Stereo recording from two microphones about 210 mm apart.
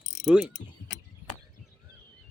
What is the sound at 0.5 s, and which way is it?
Speech, 60° left (ahead or behind).